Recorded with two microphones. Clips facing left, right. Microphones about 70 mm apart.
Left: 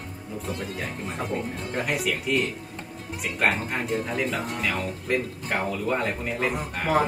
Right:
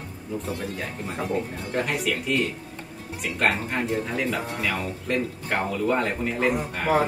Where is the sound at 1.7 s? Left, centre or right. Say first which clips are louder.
Right 2 dB; centre.